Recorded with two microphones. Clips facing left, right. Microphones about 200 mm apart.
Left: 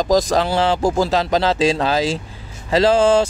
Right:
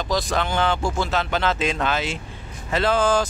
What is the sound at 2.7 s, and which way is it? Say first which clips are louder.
Speech: left 6 dB; 30° left (ahead or behind).